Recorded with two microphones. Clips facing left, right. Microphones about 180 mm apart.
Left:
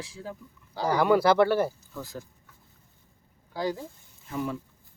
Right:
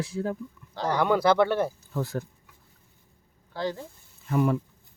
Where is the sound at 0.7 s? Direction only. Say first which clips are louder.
Left 2 dB; 10° left (ahead or behind).